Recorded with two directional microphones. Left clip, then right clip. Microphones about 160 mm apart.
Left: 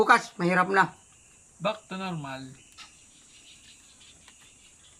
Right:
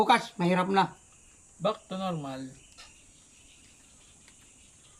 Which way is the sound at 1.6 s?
35° right (ahead or behind).